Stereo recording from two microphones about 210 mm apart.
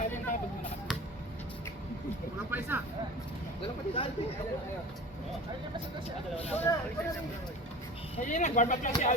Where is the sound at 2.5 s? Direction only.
10° right (ahead or behind).